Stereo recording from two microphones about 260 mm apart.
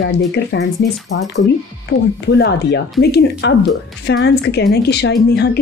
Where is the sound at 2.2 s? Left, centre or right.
Left.